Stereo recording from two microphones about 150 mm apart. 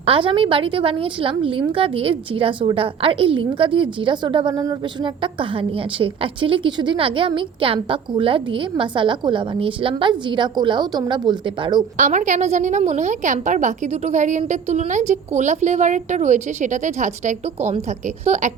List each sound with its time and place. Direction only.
0.0 s a woman's voice: 35° right (ahead or behind)
11.9 s a woman's voice: 55° right (ahead or behind)